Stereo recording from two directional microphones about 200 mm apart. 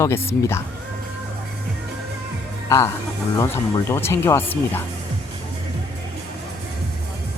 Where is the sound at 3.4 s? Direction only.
15° left (ahead or behind).